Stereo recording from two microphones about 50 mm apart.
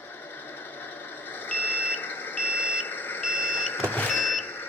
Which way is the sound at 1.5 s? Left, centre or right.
Left.